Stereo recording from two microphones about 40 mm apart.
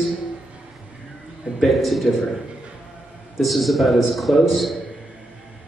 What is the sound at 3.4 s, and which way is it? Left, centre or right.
Speech, centre.